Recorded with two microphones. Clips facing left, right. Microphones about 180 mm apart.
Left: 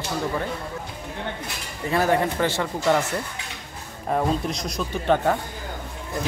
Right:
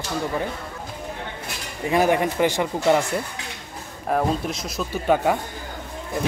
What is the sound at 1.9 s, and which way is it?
Speech, 15° right (ahead or behind).